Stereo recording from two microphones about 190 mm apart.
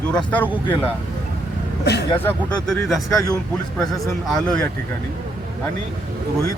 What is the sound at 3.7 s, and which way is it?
Speech, centre (ahead or behind).